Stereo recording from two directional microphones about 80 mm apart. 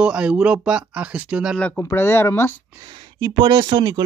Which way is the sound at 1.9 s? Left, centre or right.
Left.